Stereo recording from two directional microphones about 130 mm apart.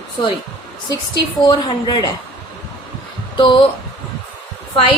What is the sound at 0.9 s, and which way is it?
A woman's voice, 35° left (ahead or behind).